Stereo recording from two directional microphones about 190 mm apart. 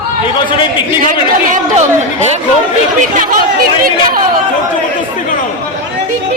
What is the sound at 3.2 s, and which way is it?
Speech, 45° right (ahead or behind).